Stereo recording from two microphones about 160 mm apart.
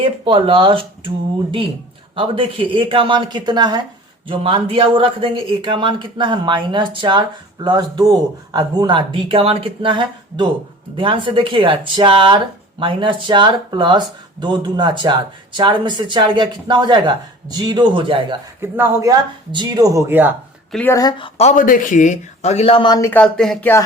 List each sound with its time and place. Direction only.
0.0 s a man's voice: 35° right (ahead or behind)
18.6 s a man's voice: 15° right (ahead or behind)
20.9 s speech: 25° left (ahead or behind)
23.0 s speech: 15° left (ahead or behind)
23.2 s speech: 5° left (ahead or behind)